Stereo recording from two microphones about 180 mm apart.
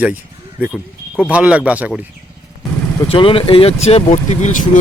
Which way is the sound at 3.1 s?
30° left (ahead or behind).